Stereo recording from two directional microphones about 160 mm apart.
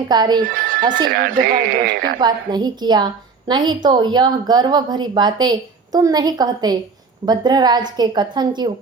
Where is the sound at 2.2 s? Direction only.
25° right (ahead or behind).